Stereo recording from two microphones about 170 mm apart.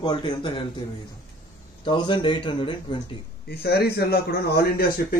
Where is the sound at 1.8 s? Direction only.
25° left (ahead or behind).